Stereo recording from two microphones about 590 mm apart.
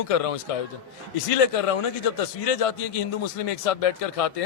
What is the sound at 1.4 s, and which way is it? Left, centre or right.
A man's voice, left.